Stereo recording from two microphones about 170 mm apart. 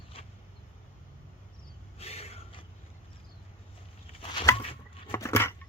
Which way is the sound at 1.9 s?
35° left (ahead or behind).